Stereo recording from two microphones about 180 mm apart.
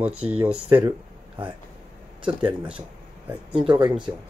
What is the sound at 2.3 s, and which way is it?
Speech, 5° right (ahead or behind).